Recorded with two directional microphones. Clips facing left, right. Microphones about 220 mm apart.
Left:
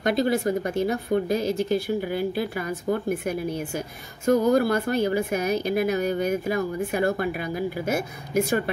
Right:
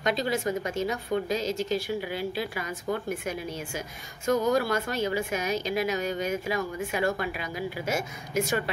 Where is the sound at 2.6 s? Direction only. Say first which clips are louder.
Left 5 dB; 35° left (ahead or behind).